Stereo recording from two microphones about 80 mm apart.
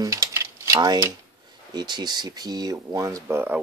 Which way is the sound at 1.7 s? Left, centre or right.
Right.